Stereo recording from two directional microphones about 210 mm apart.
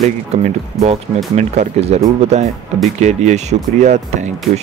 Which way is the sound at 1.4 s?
30° right (ahead or behind).